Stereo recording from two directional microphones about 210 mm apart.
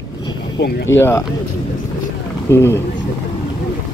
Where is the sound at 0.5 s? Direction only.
60° left (ahead or behind).